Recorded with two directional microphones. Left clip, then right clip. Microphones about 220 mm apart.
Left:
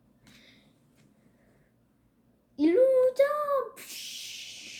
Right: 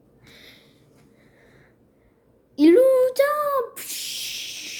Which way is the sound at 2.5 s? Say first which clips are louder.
Right 7 dB; 40° right (ahead or behind).